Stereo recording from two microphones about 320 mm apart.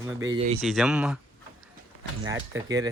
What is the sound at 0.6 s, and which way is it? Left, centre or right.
Speech, centre.